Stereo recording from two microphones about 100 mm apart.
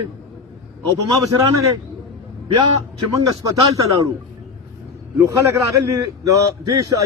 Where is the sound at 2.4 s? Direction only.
50° right (ahead or behind).